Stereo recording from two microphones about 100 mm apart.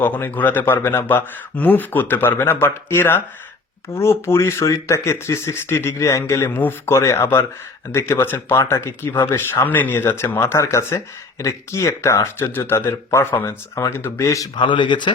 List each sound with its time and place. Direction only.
0.0 s speech: 20° left (ahead or behind)
14.5 s speech: 50° left (ahead or behind)